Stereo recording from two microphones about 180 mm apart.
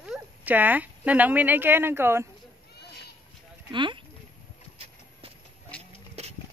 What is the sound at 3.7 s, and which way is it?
Speech, 25° right (ahead or behind).